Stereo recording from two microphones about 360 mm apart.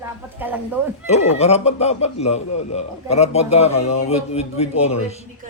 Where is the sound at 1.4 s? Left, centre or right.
Centre.